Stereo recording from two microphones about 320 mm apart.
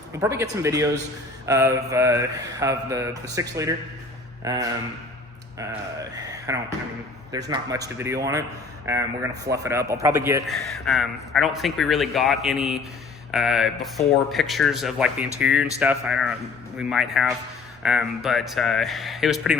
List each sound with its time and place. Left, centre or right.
0.1 s a man's voice: centre